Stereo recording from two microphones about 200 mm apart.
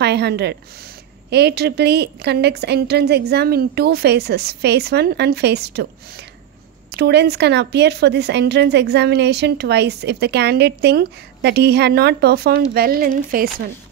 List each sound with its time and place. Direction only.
0.0 s speech: 55° right (ahead or behind)